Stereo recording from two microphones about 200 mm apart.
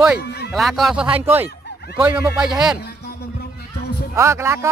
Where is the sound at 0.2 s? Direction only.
55° left (ahead or behind).